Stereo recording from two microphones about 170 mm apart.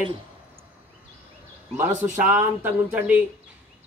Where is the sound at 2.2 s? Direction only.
10° right (ahead or behind).